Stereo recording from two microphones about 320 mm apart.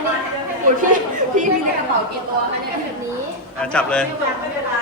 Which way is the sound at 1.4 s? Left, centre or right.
Right.